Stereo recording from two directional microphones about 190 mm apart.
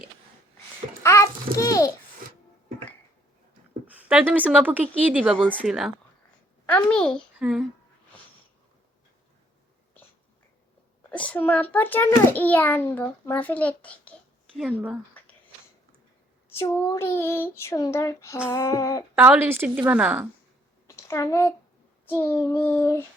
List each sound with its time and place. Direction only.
1.0 s a sound: 15° left (ahead or behind)
3.9 s a child's voice: 10° right (ahead or behind)
11.1 s a child's voice: 5° left (ahead or behind)
14.6 s speech: 10° right (ahead or behind)
15.2 s a sound: 10° left (ahead or behind)
16.5 s a child's voice: 15° left (ahead or behind)
19.1 s speech: 10° right (ahead or behind)
20.8 s a sound: 15° left (ahead or behind)
22.0 s a child's voice: 10° left (ahead or behind)